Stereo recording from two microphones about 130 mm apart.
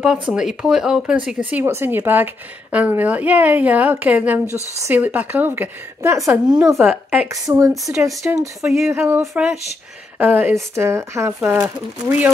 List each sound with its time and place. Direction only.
0.0 s a woman's voice: 5° right (ahead or behind); by 6.9 s 20° right (ahead or behind)
6.9 s a woman's voice: 10° right (ahead or behind)
7.4 s a woman's voice: 25° right (ahead or behind)
8.2 s a woman's voice: 10° right (ahead or behind)
9.3 s speech: 5° right (ahead or behind)
10.1 s a woman's voice: 15° right (ahead or behind)